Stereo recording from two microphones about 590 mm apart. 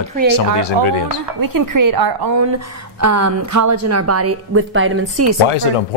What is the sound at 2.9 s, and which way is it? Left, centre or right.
A woman's voice, right.